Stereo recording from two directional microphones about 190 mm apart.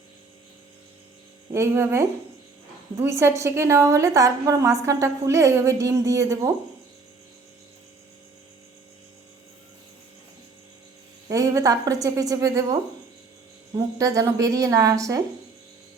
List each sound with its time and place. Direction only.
1.5 s a woman's voice: 15° right (ahead or behind)
11.3 s a woman's voice: 15° right (ahead or behind)
13.7 s a woman's voice: 15° right (ahead or behind)